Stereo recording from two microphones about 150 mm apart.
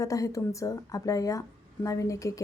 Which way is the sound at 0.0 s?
20° left (ahead or behind).